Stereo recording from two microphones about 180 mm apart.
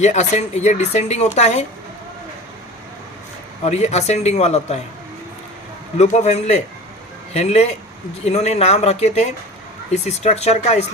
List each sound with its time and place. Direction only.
0.0 s speech: 40° left (ahead or behind)
3.6 s speech: 40° left (ahead or behind)
6.0 s speech: 40° left (ahead or behind)